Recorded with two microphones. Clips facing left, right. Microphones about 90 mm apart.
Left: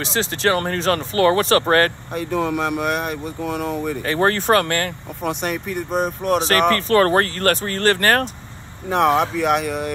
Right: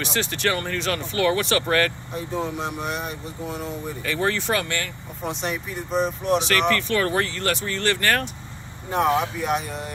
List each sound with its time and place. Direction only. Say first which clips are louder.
0.0 s speech: left 4 dB; 30° left (ahead or behind)
0.6 s speech: left 6 dB; 40° left (ahead or behind)
2.1 s speech: left 7 dB; 75° left (ahead or behind)
4.0 s speech: left 4 dB; 45° left (ahead or behind)
8.8 s speech: left 4 dB; 80° left